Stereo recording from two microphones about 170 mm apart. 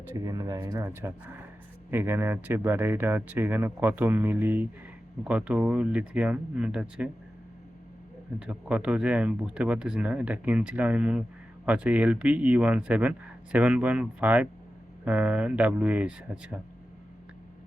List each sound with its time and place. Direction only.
0.3 s speech: 20° right (ahead or behind); by 7.1 s 5° right (ahead or behind)
8.4 s speech: 5° right (ahead or behind)